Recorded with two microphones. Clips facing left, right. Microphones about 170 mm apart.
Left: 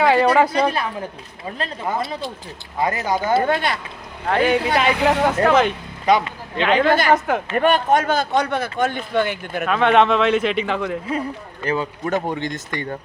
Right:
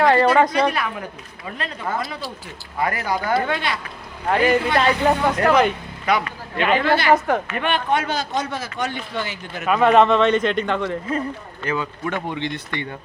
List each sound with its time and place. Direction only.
0.0 s a sound: 5° left (ahead or behind)
0.5 s speech: 30° left (ahead or behind)
3.4 s speech: 45° left (ahead or behind)
4.3 s speech: 5° right (ahead or behind)
4.7 s speech: 10° left (ahead or behind)
4.9 s speech: 90° left
5.4 s speech: centre (ahead or behind)
6.1 s speech: 25° left (ahead or behind)
6.6 s speech: 5° right (ahead or behind)
6.8 s speech: 45° left (ahead or behind)
7.1 s speech: centre (ahead or behind)
7.5 s speech: 40° left (ahead or behind); by 9.6 s 60° left (ahead or behind)
9.6 s speech: 5° right (ahead or behind)
11.6 s speech: 35° left (ahead or behind)